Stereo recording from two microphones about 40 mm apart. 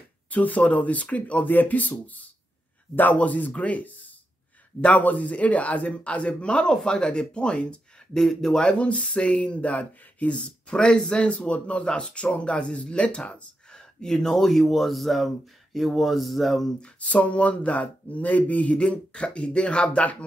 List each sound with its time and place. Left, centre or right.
0.3 s a man's voice: left
1.5 s a man's voice: left
8.2 s speech: centre
8.7 s speech: left
13.7 s speech: centre
17.0 s a man's voice: left
18.8 s speech: left